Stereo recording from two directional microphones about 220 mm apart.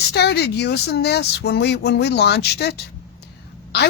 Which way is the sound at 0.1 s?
50° left (ahead or behind).